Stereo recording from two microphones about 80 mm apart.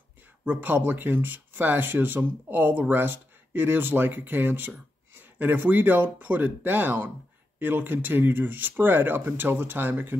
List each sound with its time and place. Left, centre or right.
0.5 s speech: right